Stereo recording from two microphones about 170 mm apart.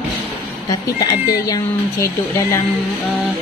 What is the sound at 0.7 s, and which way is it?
Speech, 20° left (ahead or behind).